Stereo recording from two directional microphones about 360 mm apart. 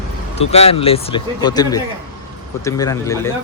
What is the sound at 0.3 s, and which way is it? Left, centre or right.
Speech, centre.